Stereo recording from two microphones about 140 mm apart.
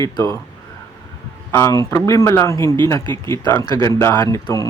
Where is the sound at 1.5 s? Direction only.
20° left (ahead or behind).